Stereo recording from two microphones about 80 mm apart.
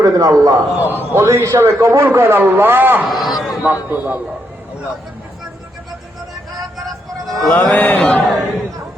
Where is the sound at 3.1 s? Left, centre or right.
Centre.